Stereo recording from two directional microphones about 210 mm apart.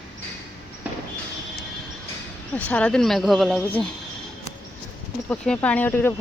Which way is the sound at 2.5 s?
5° left (ahead or behind).